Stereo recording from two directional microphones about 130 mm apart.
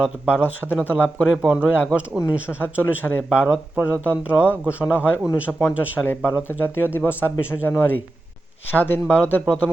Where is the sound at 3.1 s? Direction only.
10° left (ahead or behind).